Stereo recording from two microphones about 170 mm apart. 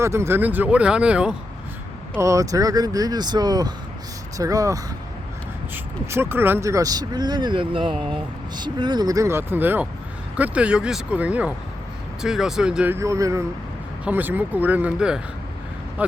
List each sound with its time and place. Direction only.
0.0 s speech: 15° right (ahead or behind)
2.1 s speech: 20° right (ahead or behind)